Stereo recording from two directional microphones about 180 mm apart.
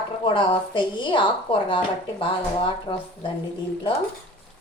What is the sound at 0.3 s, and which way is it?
A woman's voice, 30° left (ahead or behind).